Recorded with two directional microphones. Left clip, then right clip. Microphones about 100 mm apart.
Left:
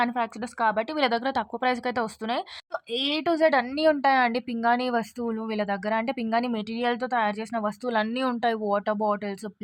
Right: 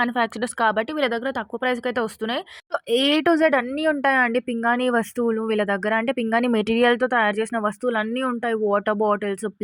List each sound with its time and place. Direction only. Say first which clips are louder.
0.2 s speech: right 5 dB; 35° right (ahead or behind)
0.9 s speech: right 1 dB; 5° right (ahead or behind); by 2.4 s 20° right (ahead or behind)
2.7 s a woman's voice: right 8 dB; 55° right (ahead or behind)
3.3 s speech: left 1 dB; 30° right (ahead or behind)
3.8 s speech: right 1 dB; 20° right (ahead or behind)
8.1 s speech: right 2 dB; 10° right (ahead or behind)
8.6 s speech: right 5 dB; 25° right (ahead or behind)